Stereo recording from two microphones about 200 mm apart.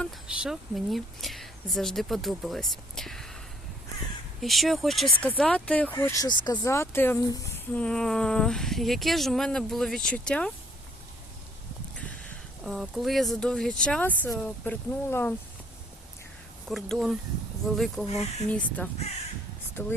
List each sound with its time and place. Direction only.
0.0 s a woman's voice: centre (ahead or behind)
4.4 s speech: centre (ahead or behind); by 7.8 s 15° left (ahead or behind)
7.8 s speech: 5° left (ahead or behind)
12.6 s speech: centre (ahead or behind)
16.6 s speech: centre (ahead or behind)
18.0 s speech: 30° left (ahead or behind)
18.4 s speech: 5° left (ahead or behind)